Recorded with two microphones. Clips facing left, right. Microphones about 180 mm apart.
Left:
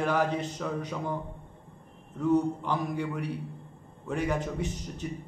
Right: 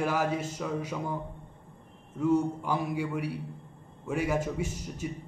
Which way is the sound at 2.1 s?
10° right (ahead or behind).